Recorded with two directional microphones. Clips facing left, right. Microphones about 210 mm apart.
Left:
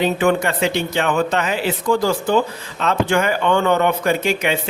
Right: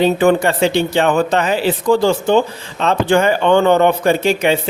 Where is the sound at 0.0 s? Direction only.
35° right (ahead or behind).